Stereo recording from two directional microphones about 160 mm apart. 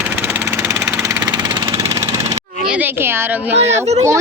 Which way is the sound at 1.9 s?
20° right (ahead or behind).